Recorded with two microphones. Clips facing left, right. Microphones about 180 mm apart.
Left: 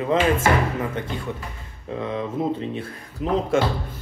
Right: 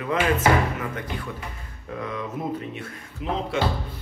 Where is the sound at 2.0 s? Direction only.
30° left (ahead or behind).